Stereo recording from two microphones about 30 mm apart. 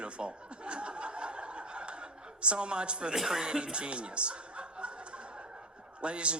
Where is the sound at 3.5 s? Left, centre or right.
Right.